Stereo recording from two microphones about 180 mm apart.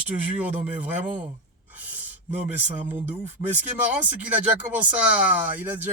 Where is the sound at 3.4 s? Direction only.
10° right (ahead or behind).